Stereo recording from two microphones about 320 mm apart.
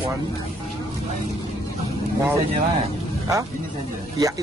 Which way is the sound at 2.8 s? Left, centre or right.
Centre.